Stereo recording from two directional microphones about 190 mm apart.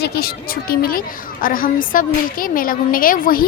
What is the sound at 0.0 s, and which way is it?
A woman's voice, 55° left (ahead or behind).